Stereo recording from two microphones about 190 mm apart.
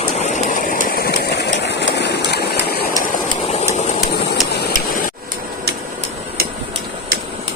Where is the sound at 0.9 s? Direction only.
55° left (ahead or behind).